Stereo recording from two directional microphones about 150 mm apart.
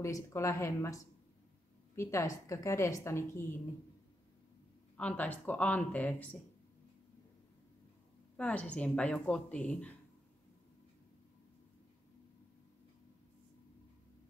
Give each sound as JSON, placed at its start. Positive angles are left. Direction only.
{"t": 0.0, "sound": "a woman's voice", "side_deg": 20}
{"t": 4.9, "sound": "a woman's voice", "side_deg": 10}
{"t": 8.4, "sound": "a woman's voice", "side_deg": 10}